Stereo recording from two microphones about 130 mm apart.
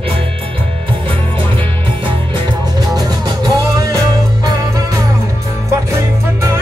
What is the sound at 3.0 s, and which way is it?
Music, 30° right (ahead or behind).